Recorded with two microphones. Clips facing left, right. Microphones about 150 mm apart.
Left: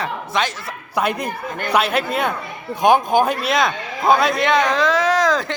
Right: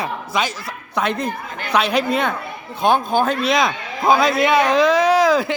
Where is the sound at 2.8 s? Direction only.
15° left (ahead or behind).